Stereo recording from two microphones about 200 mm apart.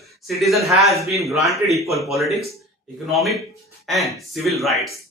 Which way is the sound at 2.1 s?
Centre (ahead or behind).